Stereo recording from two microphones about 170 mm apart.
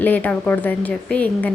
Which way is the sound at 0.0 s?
10° left (ahead or behind).